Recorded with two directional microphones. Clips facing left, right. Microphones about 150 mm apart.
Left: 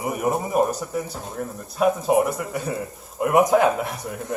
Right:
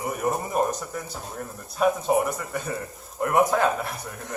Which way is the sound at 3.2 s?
15° left (ahead or behind).